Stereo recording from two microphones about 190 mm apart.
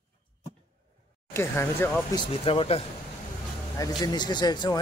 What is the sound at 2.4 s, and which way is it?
Speech, 30° left (ahead or behind).